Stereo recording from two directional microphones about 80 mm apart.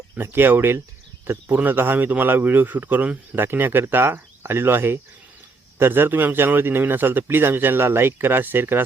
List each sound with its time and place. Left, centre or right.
0.2 s a man's voice: right